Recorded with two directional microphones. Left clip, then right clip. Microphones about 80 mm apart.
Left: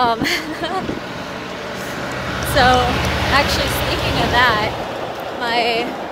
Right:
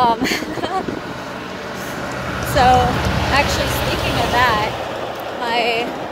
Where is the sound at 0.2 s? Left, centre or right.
Centre.